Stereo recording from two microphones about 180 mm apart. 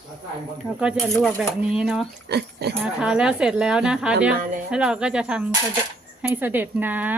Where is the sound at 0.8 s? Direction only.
5° right (ahead or behind).